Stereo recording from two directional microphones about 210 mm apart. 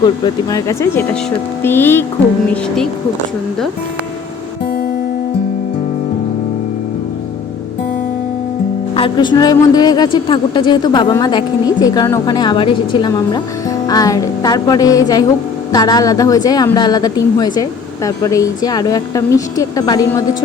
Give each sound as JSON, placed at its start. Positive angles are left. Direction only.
{"t": 0.5, "sound": "a woman's voice", "side_deg": 15}
{"t": 9.0, "sound": "a woman's voice", "side_deg": 20}